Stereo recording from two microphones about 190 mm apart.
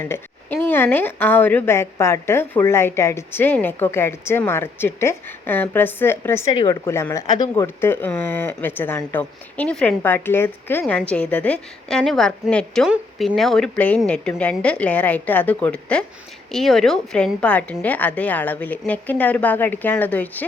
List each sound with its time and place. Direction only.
0.0 s speech: 10° left (ahead or behind)